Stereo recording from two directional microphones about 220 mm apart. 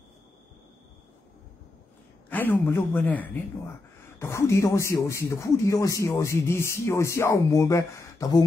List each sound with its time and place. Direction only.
2.2 s speech: 10° left (ahead or behind)